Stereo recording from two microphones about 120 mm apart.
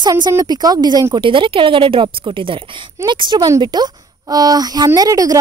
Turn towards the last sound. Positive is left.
turn(degrees=-30)  # may be behind; listen again after turning